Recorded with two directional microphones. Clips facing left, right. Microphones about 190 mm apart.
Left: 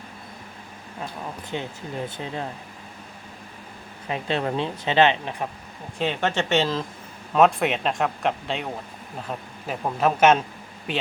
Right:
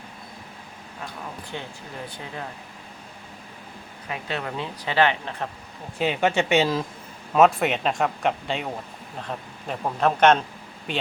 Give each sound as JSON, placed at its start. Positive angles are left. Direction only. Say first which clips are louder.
{"t": 1.5, "sound": "speech", "louder": "left 8 dB", "side_deg": 20}
{"t": 4.1, "sound": "speech", "louder": "left 5 dB", "side_deg": 30}
{"t": 6.0, "sound": "speech", "louder": "right 2 dB", "side_deg": -10}